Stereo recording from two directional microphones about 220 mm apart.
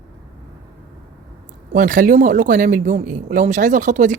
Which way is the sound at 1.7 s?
35° right (ahead or behind).